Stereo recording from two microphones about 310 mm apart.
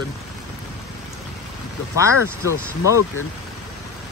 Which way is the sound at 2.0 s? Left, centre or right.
Centre.